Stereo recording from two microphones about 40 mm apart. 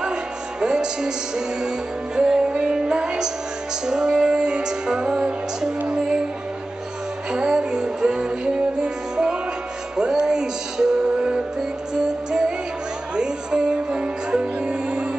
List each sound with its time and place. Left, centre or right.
0.0 s music: centre
7.2 s music: centre